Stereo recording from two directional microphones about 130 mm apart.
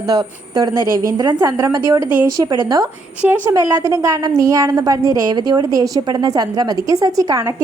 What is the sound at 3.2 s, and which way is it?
A woman's voice, 15° right (ahead or behind).